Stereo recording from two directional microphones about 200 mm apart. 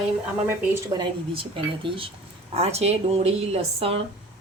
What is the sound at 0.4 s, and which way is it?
Speech, 15° right (ahead or behind).